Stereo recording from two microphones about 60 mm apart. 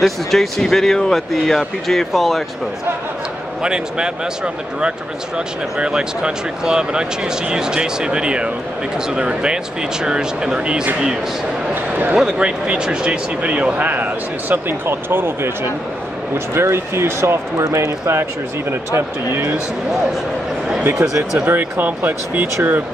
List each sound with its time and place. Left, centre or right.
0.0 s speech: centre
3.6 s speech: centre
5.8 s speech: centre
11.7 s speech: right
12.2 s speech: centre; by 19.5 s right
21.0 s speech: centre
21.5 s speech: right